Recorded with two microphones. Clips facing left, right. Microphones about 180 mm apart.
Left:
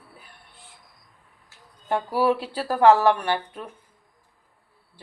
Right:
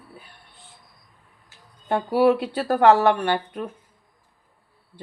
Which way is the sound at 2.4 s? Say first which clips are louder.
Right 1 dB; 60° right (ahead or behind).